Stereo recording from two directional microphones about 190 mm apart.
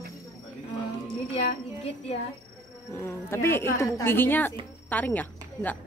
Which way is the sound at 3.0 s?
15° left (ahead or behind).